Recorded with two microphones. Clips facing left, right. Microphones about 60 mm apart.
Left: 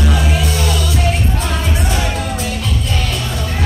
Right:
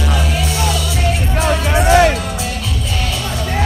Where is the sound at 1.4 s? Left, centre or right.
Right.